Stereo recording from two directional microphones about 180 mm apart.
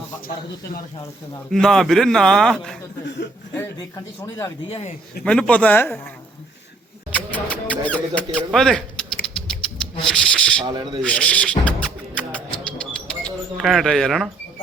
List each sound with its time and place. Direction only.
1.5 s a man's voice: centre (ahead or behind)
3.6 s speech: 15° left (ahead or behind)
5.2 s speech: 5° left (ahead or behind)
7.1 s speech: 10° left (ahead or behind)
10.0 s a sound: 5° left (ahead or behind)
10.7 s speech: 25° right (ahead or behind)
11.0 s music: 5° left (ahead or behind)
12.8 s a sound: 5° left (ahead or behind)